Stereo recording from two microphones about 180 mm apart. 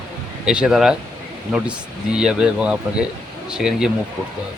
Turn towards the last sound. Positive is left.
turn(degrees=-5)  # may be behind; listen again after turning